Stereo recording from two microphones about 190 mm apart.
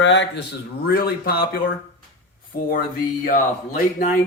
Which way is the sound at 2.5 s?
50° left (ahead or behind).